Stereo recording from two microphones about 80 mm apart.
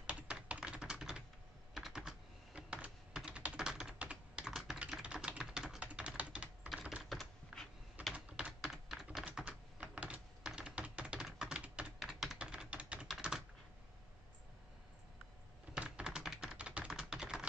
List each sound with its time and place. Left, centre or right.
0.0 s typing: centre
6.7 s typing: centre
8.1 s typing: centre
15.7 s typing: centre